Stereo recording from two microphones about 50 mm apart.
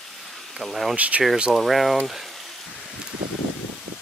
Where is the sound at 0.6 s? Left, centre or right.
Centre.